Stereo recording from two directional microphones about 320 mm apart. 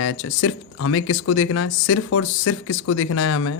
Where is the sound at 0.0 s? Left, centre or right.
Left.